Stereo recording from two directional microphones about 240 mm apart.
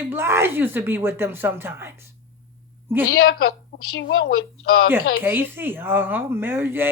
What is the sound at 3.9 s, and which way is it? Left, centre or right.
Speech, left.